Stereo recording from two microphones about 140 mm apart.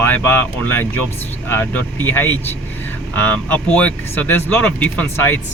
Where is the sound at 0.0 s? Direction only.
10° left (ahead or behind).